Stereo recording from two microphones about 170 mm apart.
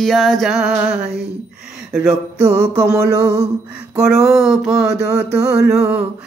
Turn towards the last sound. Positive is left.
turn(degrees=-5)  # may be behind; listen again after turning